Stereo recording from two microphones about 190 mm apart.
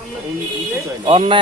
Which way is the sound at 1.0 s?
30° right (ahead or behind).